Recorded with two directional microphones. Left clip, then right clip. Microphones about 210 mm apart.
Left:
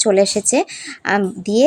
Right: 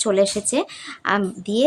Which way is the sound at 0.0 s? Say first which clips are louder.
Left 4 dB; 15° left (ahead or behind).